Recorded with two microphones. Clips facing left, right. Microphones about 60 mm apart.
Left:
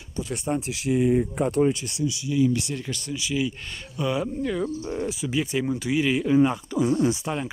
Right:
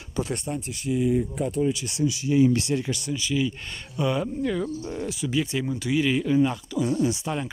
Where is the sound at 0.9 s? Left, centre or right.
Left.